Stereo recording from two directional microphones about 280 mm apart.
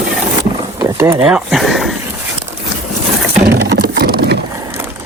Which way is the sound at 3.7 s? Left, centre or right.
Right.